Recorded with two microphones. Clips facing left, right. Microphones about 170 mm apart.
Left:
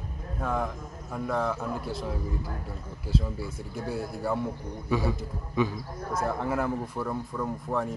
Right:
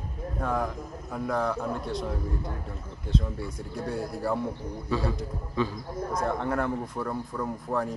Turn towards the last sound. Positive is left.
turn(degrees=0)  # may be behind; listen again after turning